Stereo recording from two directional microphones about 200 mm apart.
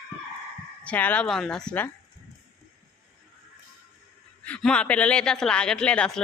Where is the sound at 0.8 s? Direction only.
5° left (ahead or behind).